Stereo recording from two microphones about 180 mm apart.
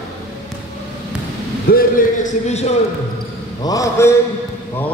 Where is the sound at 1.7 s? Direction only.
45° left (ahead or behind).